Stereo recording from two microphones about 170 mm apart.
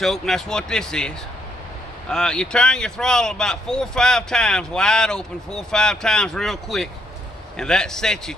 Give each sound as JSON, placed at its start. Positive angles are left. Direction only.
{"t": 0.0, "sound": "speech", "side_deg": 0}